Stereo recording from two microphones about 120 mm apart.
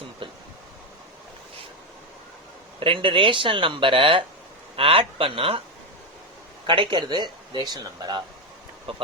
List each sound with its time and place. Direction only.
0.2 s a sound: 45° right (ahead or behind)
2.8 s speech: 45° right (ahead or behind)
6.7 s speech: 40° right (ahead or behind)
8.9 s speech: 50° right (ahead or behind)